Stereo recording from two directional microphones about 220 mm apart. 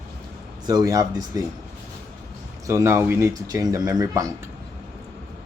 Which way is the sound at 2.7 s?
10° right (ahead or behind).